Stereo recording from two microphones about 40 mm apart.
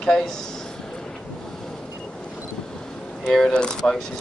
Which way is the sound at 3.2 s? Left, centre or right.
Centre.